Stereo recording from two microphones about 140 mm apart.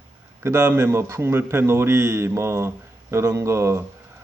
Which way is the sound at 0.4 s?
15° right (ahead or behind).